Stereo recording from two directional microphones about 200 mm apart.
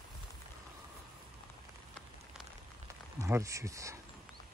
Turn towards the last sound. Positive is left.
turn(degrees=-15)  # may be behind; listen again after turning